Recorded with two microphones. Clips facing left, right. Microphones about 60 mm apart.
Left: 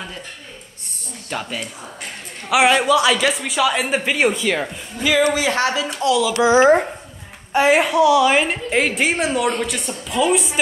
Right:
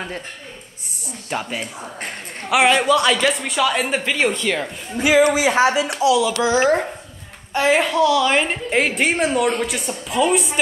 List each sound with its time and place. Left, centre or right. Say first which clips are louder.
1.3 s speech: right 1 dB; centre
2.5 s speech: left 1 dB; centre
5.0 s speech: right 2 dB; right
5.3 s speech: right 3 dB; centre
5.9 s speech: left 1 dB; centre
6.3 s speech: left 4 dB; left; by 10.6 s centre